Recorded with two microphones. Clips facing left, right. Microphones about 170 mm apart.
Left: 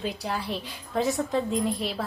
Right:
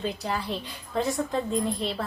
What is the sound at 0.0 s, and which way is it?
A woman's voice, centre (ahead or behind).